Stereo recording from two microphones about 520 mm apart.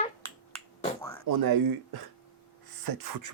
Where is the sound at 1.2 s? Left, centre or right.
Right.